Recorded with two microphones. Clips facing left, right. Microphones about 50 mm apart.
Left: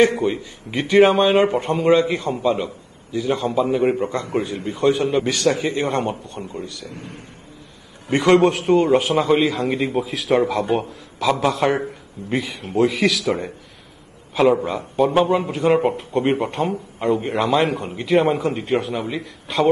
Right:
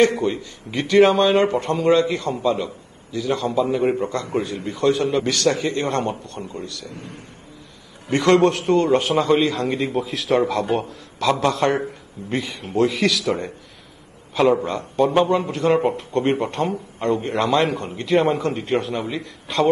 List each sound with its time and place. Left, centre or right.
0.0 s speech: centre
6.9 s speech: left
8.1 s a man's voice: centre
14.3 s a man's voice: centre